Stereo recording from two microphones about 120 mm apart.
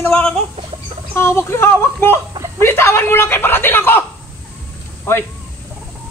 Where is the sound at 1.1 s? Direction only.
20° left (ahead or behind).